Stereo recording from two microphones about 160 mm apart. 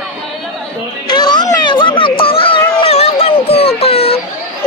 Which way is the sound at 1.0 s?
25° left (ahead or behind).